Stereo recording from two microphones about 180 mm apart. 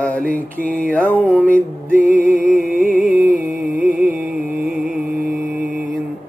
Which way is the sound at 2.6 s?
50° right (ahead or behind).